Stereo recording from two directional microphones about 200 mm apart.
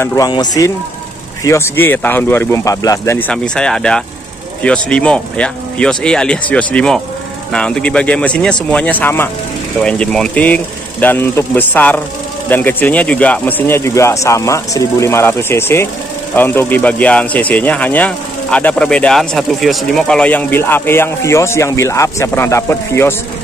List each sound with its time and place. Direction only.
0.0 s a man's voice: 15° left (ahead or behind)